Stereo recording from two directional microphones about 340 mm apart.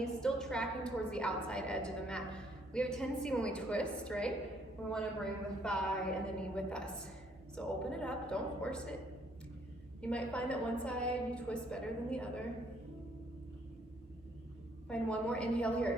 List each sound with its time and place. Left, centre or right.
0.0 s a woman's voice: centre
10.0 s a woman's voice: centre
14.8 s a woman's voice: centre